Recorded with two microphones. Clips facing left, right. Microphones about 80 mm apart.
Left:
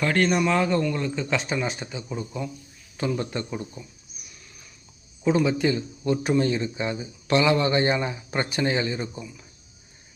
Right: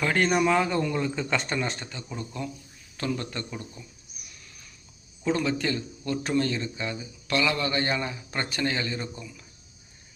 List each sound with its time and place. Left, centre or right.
0.0 s speech: centre
5.2 s speech: centre